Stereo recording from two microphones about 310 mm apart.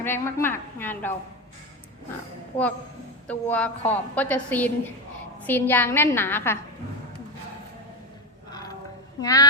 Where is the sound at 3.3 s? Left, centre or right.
Centre.